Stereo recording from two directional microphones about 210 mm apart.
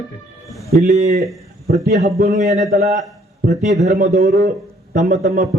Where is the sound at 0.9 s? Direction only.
30° right (ahead or behind).